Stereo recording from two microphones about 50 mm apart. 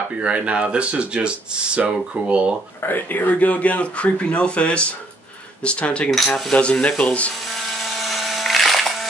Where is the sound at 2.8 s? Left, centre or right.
Left.